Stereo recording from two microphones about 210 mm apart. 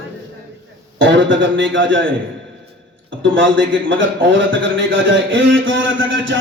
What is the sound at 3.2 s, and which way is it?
A man's voice, 65° right (ahead or behind).